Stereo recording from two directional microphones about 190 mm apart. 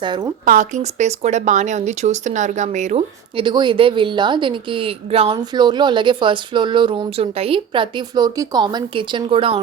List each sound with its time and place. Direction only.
0.0 s speech: 20° right (ahead or behind)
0.4 s a woman's voice: 45° right (ahead or behind); by 9.6 s 30° right (ahead or behind)